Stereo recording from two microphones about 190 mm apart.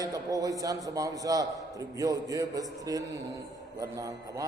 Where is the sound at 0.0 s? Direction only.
20° right (ahead or behind).